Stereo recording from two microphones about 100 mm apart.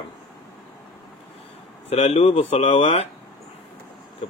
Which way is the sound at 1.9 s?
90° left.